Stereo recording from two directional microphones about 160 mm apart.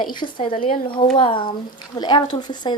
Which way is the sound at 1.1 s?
30° left (ahead or behind).